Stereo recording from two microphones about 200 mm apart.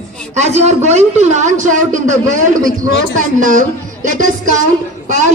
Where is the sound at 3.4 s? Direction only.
40° right (ahead or behind).